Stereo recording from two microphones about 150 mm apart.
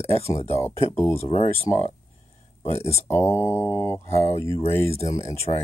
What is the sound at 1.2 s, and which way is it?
Speech, 45° left (ahead or behind).